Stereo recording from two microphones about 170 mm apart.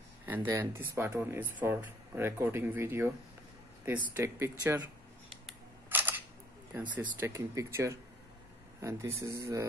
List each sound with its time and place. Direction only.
0.5 s speech: 15° right (ahead or behind)
5.9 s single-lens reflex camera: 10° right (ahead or behind)
6.7 s speech: 10° right (ahead or behind)